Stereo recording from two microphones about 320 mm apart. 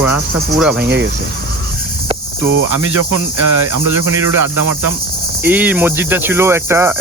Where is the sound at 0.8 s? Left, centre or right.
Right.